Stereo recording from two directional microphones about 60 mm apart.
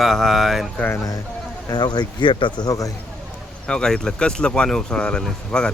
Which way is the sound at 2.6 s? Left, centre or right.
Left.